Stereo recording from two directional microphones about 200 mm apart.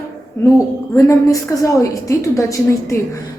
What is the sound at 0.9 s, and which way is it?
A woman's voice, 15° left (ahead or behind).